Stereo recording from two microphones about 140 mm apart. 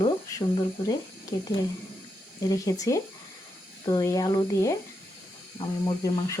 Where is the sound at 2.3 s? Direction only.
25° left (ahead or behind).